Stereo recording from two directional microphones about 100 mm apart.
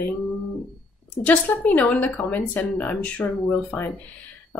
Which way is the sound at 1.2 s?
15° left (ahead or behind).